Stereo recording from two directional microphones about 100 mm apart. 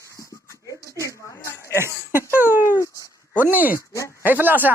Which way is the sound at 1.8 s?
25° right (ahead or behind).